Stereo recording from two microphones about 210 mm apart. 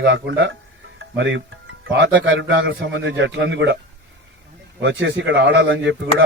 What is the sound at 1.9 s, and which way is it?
Speech, 60° right (ahead or behind).